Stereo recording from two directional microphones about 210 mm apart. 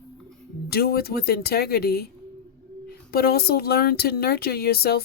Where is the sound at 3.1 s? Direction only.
50° left (ahead or behind).